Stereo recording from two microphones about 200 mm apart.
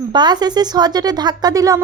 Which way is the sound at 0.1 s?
20° right (ahead or behind).